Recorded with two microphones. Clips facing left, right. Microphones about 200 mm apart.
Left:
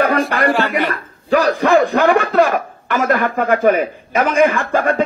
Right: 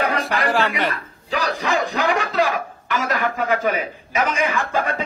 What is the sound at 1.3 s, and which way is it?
Speech, 55° left (ahead or behind).